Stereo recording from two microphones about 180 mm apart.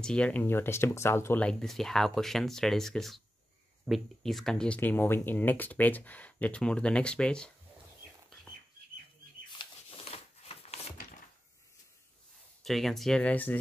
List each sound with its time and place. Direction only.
0.0 s speech: 5° left (ahead or behind)
9.5 s a sound: 30° left (ahead or behind)
12.6 s speech: centre (ahead or behind)